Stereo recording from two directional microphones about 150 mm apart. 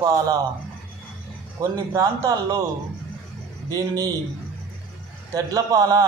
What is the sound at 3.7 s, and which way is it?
Speech, 25° right (ahead or behind).